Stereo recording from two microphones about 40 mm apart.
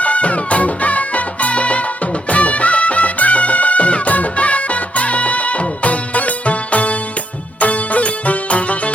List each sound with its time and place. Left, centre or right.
0.0 s music: left